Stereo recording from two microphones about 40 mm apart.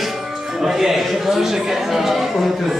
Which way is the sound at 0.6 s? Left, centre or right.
Centre.